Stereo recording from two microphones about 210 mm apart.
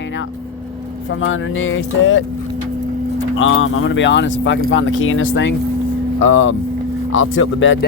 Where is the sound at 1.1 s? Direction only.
65° left (ahead or behind).